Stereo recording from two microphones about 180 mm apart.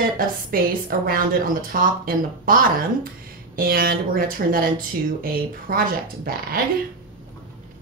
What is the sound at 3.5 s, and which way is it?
Speech, 55° right (ahead or behind).